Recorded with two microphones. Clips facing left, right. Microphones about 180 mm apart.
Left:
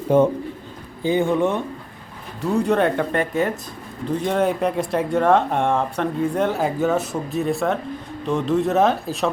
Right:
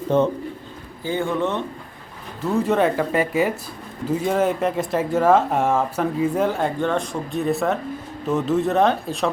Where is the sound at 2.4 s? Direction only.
Centre (ahead or behind).